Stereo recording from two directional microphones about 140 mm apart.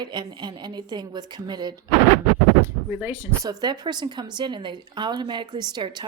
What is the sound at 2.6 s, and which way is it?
Speech, 15° right (ahead or behind).